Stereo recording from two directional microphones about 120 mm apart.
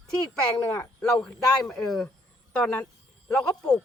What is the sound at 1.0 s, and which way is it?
A man's voice, 5° left (ahead or behind).